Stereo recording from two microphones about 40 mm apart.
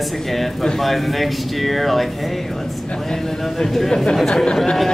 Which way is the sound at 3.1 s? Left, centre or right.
Centre.